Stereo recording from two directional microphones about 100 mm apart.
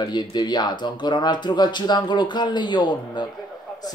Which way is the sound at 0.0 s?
45° left (ahead or behind).